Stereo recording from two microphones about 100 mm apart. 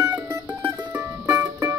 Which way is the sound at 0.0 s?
25° right (ahead or behind).